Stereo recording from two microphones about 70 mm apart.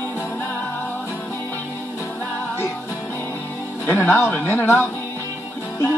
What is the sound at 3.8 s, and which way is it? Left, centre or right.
Speech, left.